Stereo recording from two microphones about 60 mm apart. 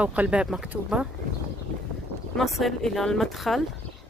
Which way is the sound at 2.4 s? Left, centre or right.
Centre.